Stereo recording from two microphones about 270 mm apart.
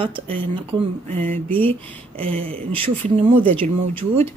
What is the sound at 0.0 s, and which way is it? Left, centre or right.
Speech, centre.